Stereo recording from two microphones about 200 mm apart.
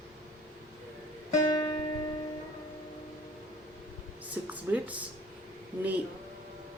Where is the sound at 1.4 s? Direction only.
20° left (ahead or behind).